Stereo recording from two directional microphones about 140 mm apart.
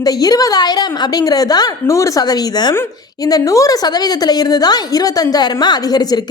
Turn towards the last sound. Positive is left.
turn(degrees=30)  # may be behind; listen again after turning